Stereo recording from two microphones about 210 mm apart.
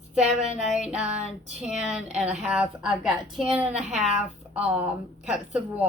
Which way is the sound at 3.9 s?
30° right (ahead or behind).